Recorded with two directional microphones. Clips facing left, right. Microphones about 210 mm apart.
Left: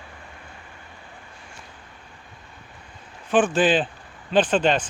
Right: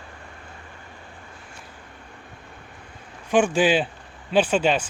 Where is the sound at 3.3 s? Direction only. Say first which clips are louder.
Even; 10° right (ahead or behind).